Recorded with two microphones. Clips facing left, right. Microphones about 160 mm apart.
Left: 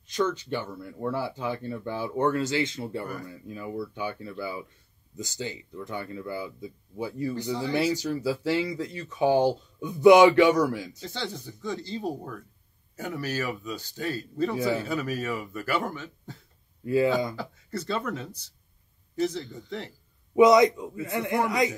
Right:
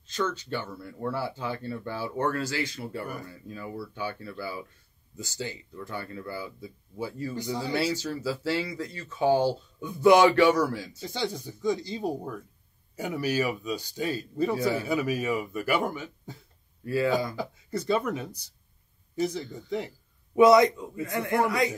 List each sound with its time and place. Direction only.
0.0 s speech: 15° left (ahead or behind)
7.3 s speech: 15° right (ahead or behind)
7.7 s speech: 15° left (ahead or behind)
11.0 s speech: 15° right (ahead or behind)
16.8 s speech: 20° left (ahead or behind)
17.4 s speech: 15° right (ahead or behind)
20.3 s speech: 20° left (ahead or behind)